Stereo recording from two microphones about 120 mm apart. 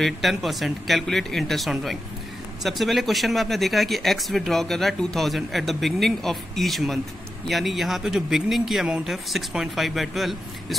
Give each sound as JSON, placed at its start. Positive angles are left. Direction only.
{"t": 0.0, "sound": "speech", "side_deg": 0}